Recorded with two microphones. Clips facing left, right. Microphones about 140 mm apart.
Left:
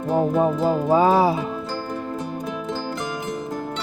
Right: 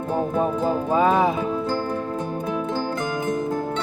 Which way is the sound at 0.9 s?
30° left (ahead or behind).